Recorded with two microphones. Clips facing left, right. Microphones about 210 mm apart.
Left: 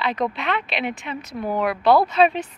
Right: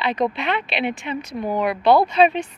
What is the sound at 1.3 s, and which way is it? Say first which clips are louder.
Speech: even; 15° right (ahead or behind).